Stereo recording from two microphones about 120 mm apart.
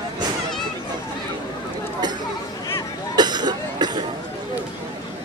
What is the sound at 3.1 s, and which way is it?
Cough, 35° right (ahead or behind).